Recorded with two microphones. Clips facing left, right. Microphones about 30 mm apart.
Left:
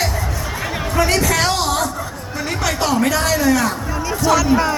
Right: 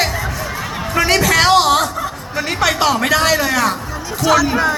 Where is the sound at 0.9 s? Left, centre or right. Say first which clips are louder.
Right 4 dB; right.